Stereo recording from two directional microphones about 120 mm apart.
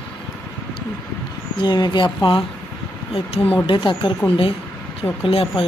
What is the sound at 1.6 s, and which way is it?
Speech, 35° left (ahead or behind).